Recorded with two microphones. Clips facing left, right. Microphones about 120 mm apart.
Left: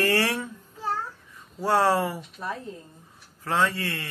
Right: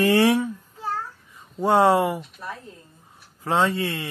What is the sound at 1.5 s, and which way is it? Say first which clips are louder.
Speech: right 4 dB; 20° right (ahead or behind).